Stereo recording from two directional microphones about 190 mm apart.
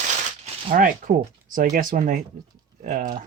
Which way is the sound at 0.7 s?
45° right (ahead or behind).